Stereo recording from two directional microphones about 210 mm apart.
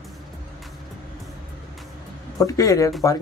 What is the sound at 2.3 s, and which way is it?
Speech, 15° left (ahead or behind).